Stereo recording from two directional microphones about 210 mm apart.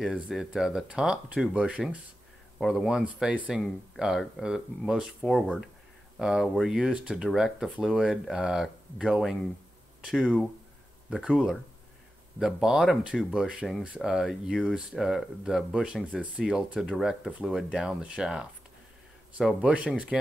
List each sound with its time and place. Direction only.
0.3 s speech: centre (ahead or behind)